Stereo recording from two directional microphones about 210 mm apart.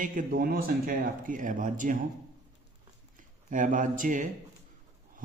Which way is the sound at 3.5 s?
40° right (ahead or behind).